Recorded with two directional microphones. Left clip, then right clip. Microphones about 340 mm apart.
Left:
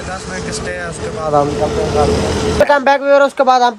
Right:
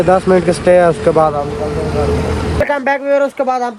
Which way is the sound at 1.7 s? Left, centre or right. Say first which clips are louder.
Left 2 dB; left.